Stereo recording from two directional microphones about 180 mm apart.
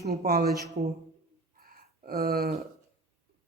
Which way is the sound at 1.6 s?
55° right (ahead or behind).